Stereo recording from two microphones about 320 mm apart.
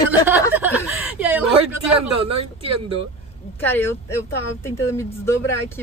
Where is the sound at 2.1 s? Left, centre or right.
Centre.